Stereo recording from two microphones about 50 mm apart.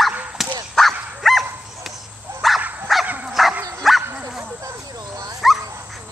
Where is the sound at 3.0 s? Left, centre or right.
Right.